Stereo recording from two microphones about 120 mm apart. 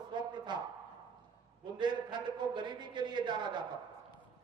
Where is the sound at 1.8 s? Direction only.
40° right (ahead or behind).